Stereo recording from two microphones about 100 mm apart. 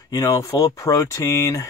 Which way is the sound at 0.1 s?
35° left (ahead or behind).